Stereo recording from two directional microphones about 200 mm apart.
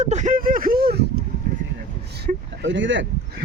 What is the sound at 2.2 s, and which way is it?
Speech, 65° right (ahead or behind).